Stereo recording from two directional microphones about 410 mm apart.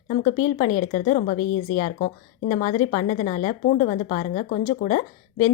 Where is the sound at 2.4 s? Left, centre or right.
Centre.